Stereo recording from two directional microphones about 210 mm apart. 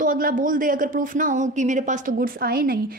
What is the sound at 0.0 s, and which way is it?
Speech, 40° right (ahead or behind).